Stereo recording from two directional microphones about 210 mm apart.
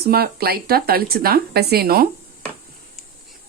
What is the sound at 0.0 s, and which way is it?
Speech, 50° right (ahead or behind).